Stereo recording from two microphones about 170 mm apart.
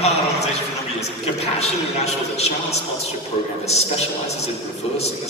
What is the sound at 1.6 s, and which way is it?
A man's voice, 40° left (ahead or behind).